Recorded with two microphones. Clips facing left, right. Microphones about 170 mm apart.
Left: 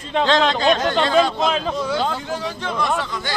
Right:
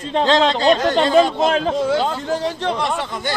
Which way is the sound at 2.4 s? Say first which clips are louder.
Right 3 dB; 35° right (ahead or behind).